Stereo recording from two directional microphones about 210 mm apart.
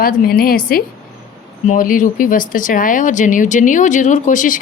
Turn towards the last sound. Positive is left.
turn(degrees=35)  # may be behind; listen again after turning